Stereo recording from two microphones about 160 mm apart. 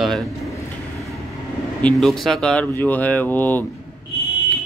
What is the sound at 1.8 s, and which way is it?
Speech, centre (ahead or behind).